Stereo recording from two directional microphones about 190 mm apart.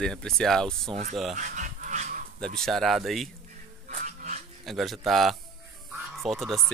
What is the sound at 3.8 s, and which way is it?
Dog, 40° right (ahead or behind).